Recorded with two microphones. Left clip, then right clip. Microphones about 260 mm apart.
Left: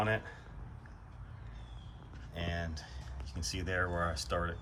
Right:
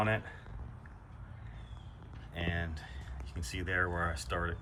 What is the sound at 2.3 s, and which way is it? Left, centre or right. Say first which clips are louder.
Speech: right 2 dB; centre.